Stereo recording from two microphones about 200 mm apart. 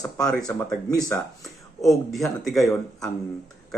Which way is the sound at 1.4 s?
Centre (ahead or behind).